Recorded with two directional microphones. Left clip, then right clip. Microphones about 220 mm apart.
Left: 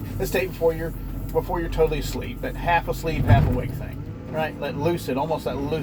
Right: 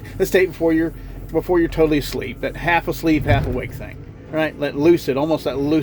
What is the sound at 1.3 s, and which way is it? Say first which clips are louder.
Speech: right 6 dB; 55° right (ahead or behind).